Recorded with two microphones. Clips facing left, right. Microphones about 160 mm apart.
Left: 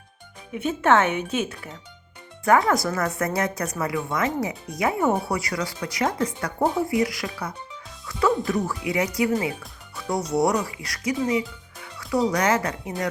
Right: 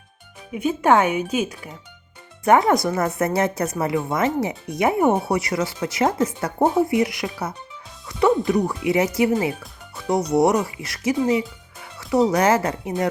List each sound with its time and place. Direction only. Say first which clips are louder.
0.5 s speech: right 2 dB; 10° right (ahead or behind)
2.4 s speech: right 3 dB; 20° right (ahead or behind)
8.0 s music: right 4 dB; 20° right (ahead or behind)
8.9 s speech: right 4 dB; 25° right (ahead or behind)